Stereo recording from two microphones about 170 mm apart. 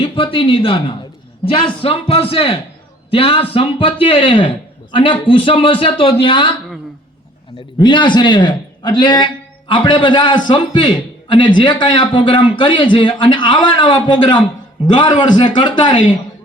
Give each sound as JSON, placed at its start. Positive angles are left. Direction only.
{"t": 0.0, "sound": "a man's voice", "side_deg": 30}
{"t": 7.8, "sound": "a man's voice", "side_deg": 25}